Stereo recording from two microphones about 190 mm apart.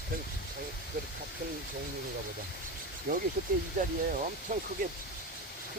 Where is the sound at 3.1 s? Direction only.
50° right (ahead or behind).